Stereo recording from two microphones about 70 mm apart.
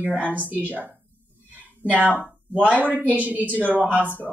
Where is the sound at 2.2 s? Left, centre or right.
Right.